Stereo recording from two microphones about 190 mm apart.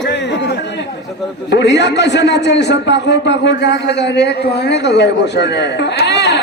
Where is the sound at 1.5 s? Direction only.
65° left (ahead or behind).